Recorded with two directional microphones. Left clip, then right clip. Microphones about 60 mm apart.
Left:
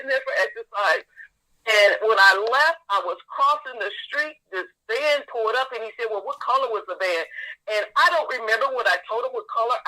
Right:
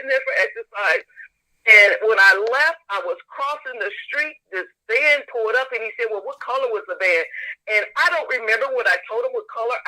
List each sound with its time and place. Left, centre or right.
0.0 s a man's voice: right